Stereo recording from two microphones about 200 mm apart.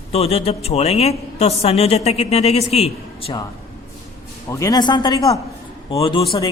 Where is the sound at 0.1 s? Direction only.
30° left (ahead or behind).